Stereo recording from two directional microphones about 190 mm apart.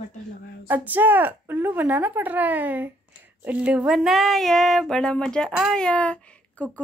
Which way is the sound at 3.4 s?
5° right (ahead or behind).